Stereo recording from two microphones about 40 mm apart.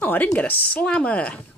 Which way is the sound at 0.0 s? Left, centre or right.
Left.